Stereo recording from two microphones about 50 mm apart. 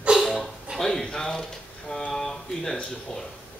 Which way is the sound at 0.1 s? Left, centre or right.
Centre.